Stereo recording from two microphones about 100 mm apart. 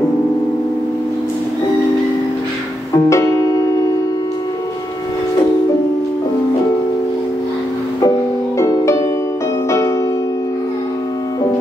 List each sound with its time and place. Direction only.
3.1 s music: 35° left (ahead or behind)
8.5 s music: 30° left (ahead or behind)